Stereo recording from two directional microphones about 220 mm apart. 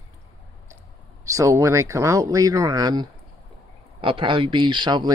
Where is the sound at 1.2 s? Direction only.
15° right (ahead or behind).